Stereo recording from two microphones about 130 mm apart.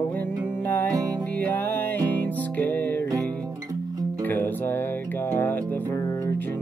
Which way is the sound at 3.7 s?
30° right (ahead or behind).